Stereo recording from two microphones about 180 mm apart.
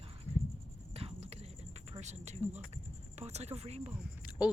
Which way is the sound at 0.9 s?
35° right (ahead or behind).